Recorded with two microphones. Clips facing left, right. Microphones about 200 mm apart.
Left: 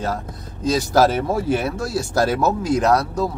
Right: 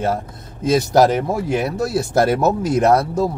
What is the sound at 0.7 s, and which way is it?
Speech, 20° right (ahead or behind).